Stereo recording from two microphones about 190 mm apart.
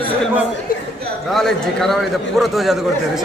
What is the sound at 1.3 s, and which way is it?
A man's voice, centre (ahead or behind).